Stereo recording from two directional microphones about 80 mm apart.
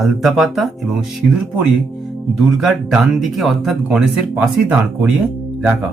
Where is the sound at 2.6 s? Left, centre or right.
Centre.